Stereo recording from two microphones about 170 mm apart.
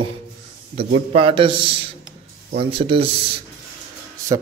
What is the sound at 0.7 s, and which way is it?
A man's voice, 35° right (ahead or behind).